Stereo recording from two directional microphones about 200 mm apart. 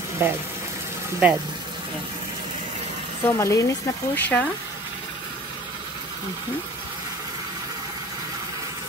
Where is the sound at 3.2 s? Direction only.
15° left (ahead or behind).